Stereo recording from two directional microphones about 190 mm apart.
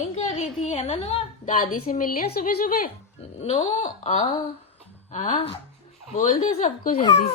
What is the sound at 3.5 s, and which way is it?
Speech, 35° left (ahead or behind).